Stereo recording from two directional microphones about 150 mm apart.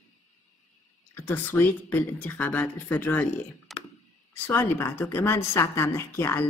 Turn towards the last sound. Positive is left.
turn(degrees=15)  # may be behind; listen again after turning